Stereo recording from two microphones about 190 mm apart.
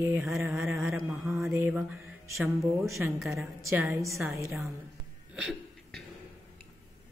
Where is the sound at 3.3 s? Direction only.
15° right (ahead or behind).